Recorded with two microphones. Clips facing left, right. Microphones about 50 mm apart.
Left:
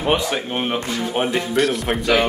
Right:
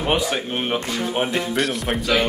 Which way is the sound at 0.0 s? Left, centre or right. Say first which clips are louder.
Left 1 dB; centre.